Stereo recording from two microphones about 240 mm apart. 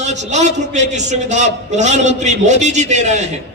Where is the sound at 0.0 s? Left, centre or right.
Right.